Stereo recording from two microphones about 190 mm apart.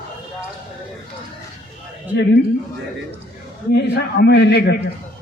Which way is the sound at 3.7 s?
60° left (ahead or behind).